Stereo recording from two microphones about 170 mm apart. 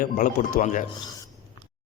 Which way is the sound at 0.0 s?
50° left (ahead or behind).